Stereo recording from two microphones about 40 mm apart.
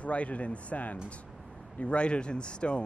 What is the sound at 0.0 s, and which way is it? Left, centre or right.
Speech, left.